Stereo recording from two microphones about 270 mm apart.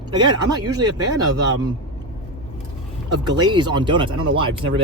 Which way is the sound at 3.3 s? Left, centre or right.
Centre.